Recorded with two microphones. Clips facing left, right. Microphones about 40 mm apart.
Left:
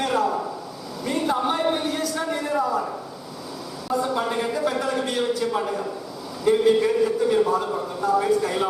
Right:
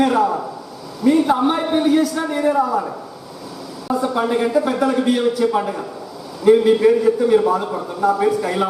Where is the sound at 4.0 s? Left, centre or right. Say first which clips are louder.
Right 7 dB; centre.